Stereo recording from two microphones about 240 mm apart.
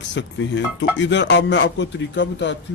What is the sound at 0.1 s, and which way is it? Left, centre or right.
Speech, left.